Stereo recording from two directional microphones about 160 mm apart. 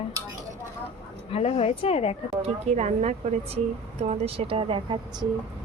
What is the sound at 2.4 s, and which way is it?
A woman's voice, 45° right (ahead or behind).